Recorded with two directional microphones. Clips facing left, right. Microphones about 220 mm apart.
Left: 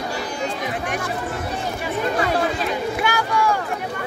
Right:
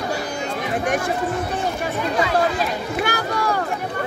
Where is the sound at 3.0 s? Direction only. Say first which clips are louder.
Right 1 dB; 40° right (ahead or behind).